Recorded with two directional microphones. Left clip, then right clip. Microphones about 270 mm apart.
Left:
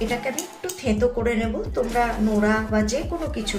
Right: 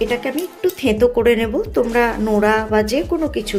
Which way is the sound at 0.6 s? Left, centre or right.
Right.